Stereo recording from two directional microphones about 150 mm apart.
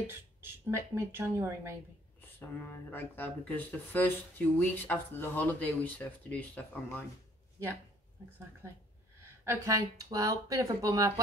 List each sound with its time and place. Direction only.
0.0 s speech: 15° right (ahead or behind)
2.3 s speech: 15° left (ahead or behind)
8.6 s speech: 15° right (ahead or behind)